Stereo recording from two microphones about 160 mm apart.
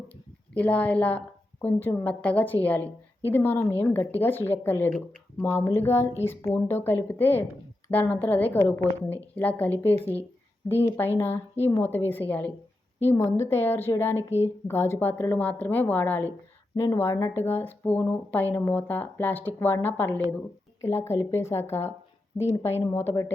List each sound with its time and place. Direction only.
0.5 s a woman's voice: 10° left (ahead or behind)